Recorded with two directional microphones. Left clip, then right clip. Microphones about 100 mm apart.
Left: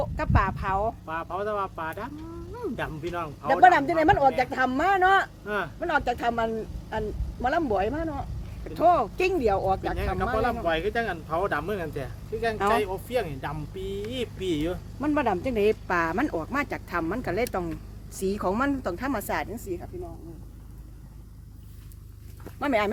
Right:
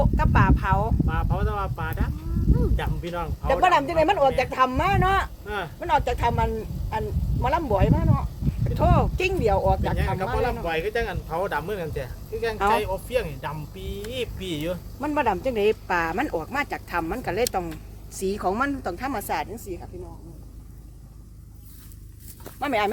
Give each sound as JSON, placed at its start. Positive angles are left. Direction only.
{"t": 0.0, "sound": "chicken", "side_deg": 5}
{"t": 1.0, "sound": "speech", "side_deg": 30}
{"t": 3.4, "sound": "speech", "side_deg": 5}
{"t": 5.5, "sound": "speech", "side_deg": 40}
{"t": 5.8, "sound": "speech", "side_deg": 5}
{"t": 10.0, "sound": "speech", "side_deg": 35}
{"t": 15.0, "sound": "speech", "side_deg": 15}
{"t": 22.6, "sound": "speech", "side_deg": 25}